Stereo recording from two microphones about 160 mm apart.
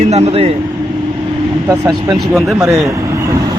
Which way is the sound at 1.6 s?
20° right (ahead or behind).